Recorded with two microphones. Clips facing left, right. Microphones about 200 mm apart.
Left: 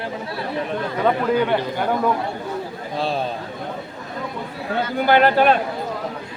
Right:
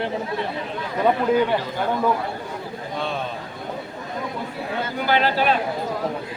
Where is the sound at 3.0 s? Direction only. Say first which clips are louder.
Left 5 dB; 35° left (ahead or behind).